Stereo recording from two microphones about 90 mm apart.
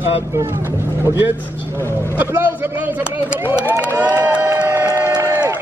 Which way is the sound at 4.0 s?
20° right (ahead or behind).